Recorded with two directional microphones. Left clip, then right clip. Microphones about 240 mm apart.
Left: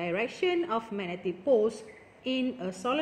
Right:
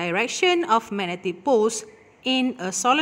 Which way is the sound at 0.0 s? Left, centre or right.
Right.